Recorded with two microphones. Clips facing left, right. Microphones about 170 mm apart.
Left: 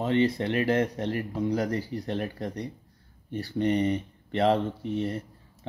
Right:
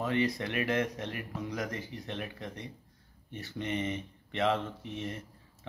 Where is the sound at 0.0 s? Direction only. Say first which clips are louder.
Left 6 dB; 30° left (ahead or behind).